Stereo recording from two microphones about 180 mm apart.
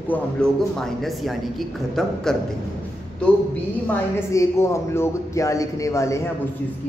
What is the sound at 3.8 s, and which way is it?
A woman's voice, 15° left (ahead or behind).